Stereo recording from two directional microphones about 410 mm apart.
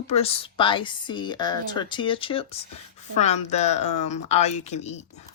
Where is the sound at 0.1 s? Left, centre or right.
Centre.